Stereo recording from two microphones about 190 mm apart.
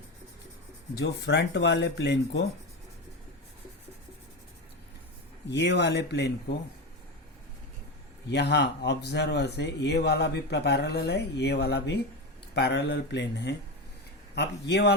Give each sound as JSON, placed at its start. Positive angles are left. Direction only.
{"t": 0.9, "sound": "speech", "side_deg": 65}
{"t": 5.5, "sound": "speech", "side_deg": 65}
{"t": 8.3, "sound": "speech", "side_deg": 60}